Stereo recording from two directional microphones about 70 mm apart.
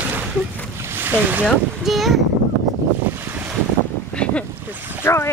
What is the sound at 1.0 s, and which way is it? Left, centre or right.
Speech, right.